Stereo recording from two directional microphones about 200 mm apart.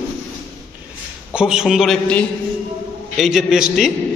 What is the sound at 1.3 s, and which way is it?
A man's voice, 5° right (ahead or behind).